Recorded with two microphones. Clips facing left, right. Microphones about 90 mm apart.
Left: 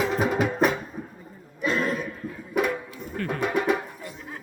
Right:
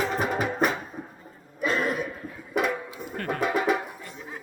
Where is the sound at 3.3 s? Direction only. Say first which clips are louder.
Even; centre (ahead or behind).